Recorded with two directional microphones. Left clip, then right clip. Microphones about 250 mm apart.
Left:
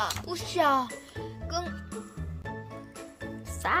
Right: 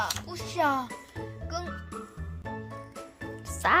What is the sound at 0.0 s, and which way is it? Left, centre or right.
Music, left.